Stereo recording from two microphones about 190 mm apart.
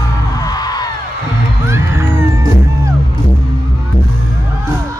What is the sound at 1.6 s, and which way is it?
Music, 15° right (ahead or behind).